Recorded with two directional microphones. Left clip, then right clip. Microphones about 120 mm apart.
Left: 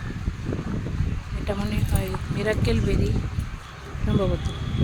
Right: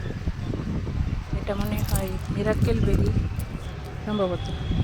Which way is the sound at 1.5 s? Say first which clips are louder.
Even; 25° left (ahead or behind).